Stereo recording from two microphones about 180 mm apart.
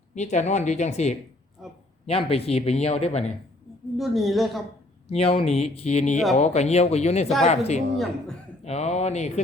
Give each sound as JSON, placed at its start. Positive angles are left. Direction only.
{"t": 0.1, "sound": "a man's voice", "side_deg": 40}
{"t": 1.6, "sound": "speech", "side_deg": 0}
{"t": 2.0, "sound": "a man's voice", "side_deg": 30}
{"t": 3.9, "sound": "speech", "side_deg": 0}
{"t": 5.1, "sound": "a man's voice", "side_deg": 30}
{"t": 8.6, "sound": "a sound", "side_deg": 35}